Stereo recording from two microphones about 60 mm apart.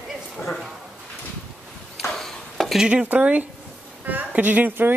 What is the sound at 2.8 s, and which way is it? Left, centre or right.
Speech, centre.